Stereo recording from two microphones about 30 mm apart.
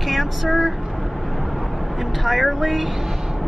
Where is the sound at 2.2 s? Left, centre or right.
Centre.